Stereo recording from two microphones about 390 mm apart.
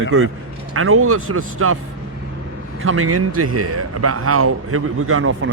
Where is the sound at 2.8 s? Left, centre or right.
Right.